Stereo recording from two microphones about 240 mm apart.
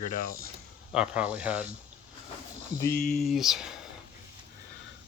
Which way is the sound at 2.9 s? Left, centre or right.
Left.